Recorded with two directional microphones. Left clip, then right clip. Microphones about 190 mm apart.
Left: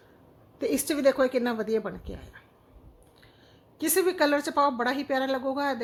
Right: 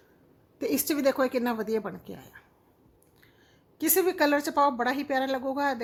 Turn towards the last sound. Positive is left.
turn(degrees=-15)  # may be behind; listen again after turning